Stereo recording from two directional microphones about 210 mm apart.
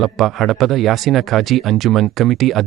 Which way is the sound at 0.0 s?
Centre (ahead or behind).